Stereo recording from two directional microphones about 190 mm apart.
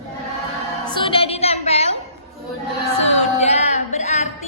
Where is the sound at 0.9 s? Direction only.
25° left (ahead or behind).